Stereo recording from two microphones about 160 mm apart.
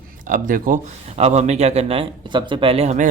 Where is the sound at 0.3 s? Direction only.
55° right (ahead or behind).